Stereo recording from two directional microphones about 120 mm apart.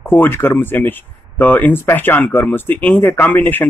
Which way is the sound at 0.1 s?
20° left (ahead or behind).